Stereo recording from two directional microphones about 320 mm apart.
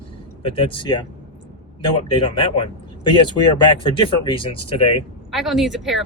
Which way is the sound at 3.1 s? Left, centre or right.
Centre.